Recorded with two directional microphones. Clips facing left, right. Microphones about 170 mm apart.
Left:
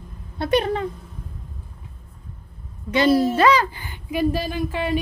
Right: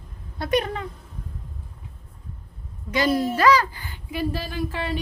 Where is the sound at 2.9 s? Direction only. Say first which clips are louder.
Left 5 dB; 30° left (ahead or behind).